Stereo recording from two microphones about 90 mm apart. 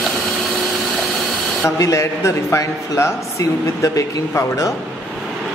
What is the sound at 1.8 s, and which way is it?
A man's voice, 35° left (ahead or behind).